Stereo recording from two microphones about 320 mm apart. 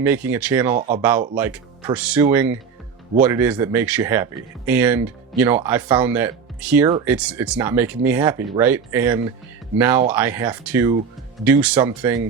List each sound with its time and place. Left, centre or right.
0.0 s speech: centre
0.8 s speech: right
1.0 s speech: centre